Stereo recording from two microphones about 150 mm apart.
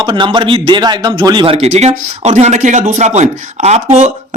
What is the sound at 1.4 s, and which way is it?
Speech, 45° right (ahead or behind).